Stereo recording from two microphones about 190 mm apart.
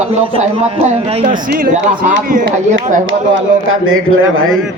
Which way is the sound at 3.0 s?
90° right.